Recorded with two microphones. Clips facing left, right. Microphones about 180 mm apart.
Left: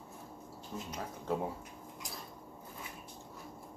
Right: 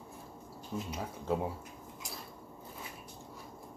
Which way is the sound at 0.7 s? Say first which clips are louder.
Right 5 dB; 10° right (ahead or behind).